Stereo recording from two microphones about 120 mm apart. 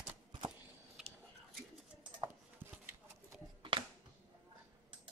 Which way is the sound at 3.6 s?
45° right (ahead or behind).